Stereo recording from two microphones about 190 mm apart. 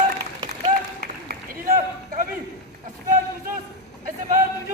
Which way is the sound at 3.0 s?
45° right (ahead or behind).